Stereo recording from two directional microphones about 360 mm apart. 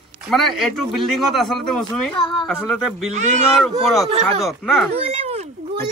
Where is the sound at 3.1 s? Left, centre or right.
Centre.